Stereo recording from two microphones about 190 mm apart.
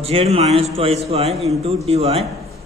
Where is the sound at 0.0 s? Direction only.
30° right (ahead or behind).